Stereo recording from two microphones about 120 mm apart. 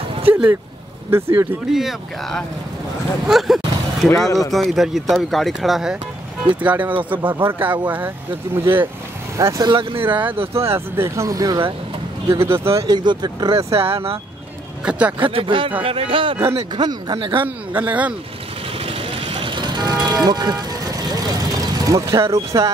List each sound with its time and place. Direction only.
0.3 s speech: 15° right (ahead or behind)
1.7 s speech: 5° right (ahead or behind); by 8.8 s 20° right (ahead or behind)
9.4 s speech: 30° right (ahead or behind); by 10.0 s 45° right (ahead or behind)
10.0 s speech: 15° right (ahead or behind)
12.8 s speech: 40° right (ahead or behind)
13.7 s speech: 50° right (ahead or behind)
14.9 s speech: 10° right (ahead or behind)
15.1 s speech: 45° right (ahead or behind)
17.7 s speech: 15° right (ahead or behind)
18.8 s vehicle: 50° right (ahead or behind); by 22.0 s 30° right (ahead or behind)
22.3 s speech: 30° right (ahead or behind)